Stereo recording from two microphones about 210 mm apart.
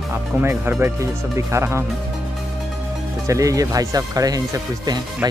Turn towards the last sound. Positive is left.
turn(degrees=-15)  # may be behind; listen again after turning